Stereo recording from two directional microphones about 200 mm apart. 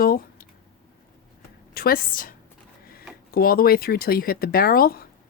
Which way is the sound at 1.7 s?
50° left (ahead or behind).